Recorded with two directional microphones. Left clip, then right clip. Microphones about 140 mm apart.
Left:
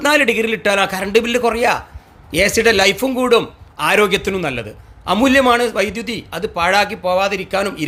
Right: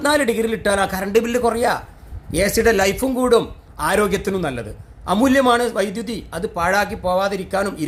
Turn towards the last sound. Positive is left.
turn(degrees=25)  # may be behind; listen again after turning